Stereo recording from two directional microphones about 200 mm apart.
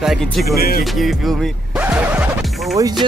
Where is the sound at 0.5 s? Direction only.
50° left (ahead or behind).